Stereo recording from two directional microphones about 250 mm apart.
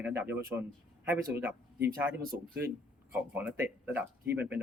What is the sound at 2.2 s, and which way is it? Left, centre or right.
Speech, right.